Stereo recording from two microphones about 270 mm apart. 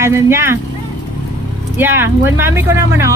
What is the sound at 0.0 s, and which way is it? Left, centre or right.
Speech, centre.